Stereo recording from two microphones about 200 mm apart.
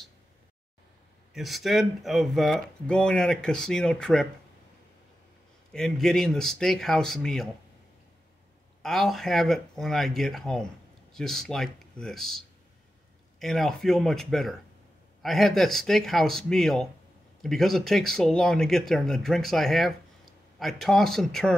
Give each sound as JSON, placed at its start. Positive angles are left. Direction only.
{"t": 1.3, "sound": "speech", "side_deg": 0}
{"t": 5.7, "sound": "speech", "side_deg": 5}
{"t": 8.8, "sound": "speech", "side_deg": 0}